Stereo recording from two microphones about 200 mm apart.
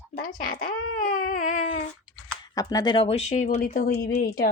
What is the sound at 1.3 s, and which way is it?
Baby cry, 40° left (ahead or behind).